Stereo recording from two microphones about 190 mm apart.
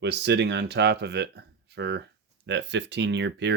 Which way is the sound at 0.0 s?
65° right (ahead or behind).